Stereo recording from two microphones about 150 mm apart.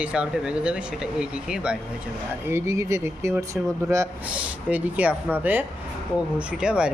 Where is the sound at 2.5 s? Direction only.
20° right (ahead or behind).